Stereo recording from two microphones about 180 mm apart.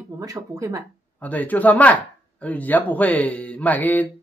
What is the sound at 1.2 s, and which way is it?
Speech, 10° left (ahead or behind).